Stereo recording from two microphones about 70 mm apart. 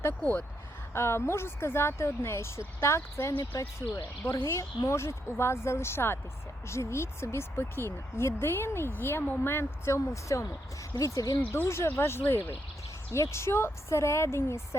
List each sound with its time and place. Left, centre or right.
0.1 s speech: left
0.9 s a woman's voice: left
11.5 s speech: left
13.1 s speech: left